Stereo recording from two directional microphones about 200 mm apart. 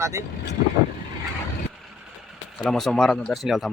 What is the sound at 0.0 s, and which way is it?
Speech, 15° right (ahead or behind).